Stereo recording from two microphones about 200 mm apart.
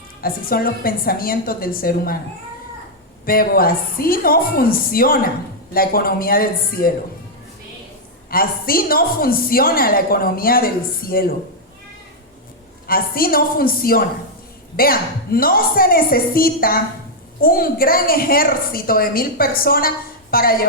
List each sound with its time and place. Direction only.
0.2 s a woman's voice: 50° left (ahead or behind)
3.2 s a woman's voice: 45° left (ahead or behind)
8.3 s a woman's voice: 45° left (ahead or behind)
12.9 s a woman's voice: 45° left (ahead or behind)